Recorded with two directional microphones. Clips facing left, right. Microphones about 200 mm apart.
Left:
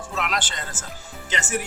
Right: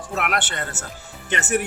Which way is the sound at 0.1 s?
60° right (ahead or behind).